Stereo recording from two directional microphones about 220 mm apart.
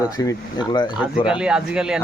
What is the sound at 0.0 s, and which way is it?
Speech, 15° left (ahead or behind).